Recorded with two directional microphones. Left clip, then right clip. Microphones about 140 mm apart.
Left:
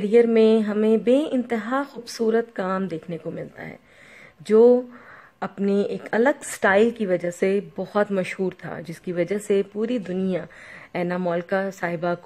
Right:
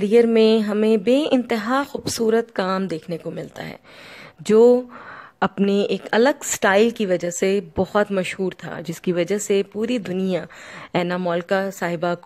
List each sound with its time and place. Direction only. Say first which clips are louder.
0.0 s a woman's voice: right 2 dB; 45° right (ahead or behind)